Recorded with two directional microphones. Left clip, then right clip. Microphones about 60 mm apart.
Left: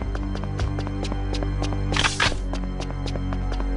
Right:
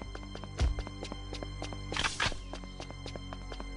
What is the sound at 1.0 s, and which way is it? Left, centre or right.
Music, left.